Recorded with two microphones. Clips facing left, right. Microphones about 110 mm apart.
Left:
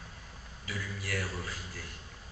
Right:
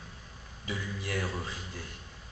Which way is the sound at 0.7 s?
25° right (ahead or behind).